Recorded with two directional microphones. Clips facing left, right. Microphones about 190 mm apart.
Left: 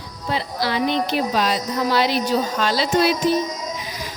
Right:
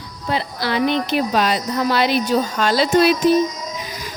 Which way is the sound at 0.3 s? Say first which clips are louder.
Right 1 dB; 55° right (ahead or behind).